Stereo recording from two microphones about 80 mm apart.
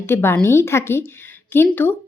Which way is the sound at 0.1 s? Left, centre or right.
Left.